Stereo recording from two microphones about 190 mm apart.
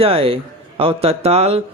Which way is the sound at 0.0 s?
30° right (ahead or behind).